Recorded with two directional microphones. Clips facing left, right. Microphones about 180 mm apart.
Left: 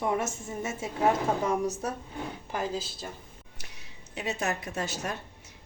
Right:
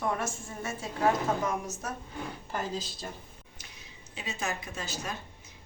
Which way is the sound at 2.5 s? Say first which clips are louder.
Left 3 dB; 10° left (ahead or behind).